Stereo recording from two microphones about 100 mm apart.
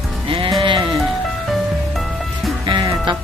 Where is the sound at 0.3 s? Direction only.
60° right (ahead or behind).